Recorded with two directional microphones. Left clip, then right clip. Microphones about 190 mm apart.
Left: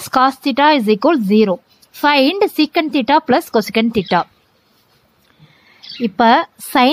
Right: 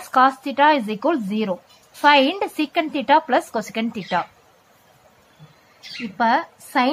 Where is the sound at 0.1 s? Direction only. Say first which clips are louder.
Left 3 dB; 45° left (ahead or behind).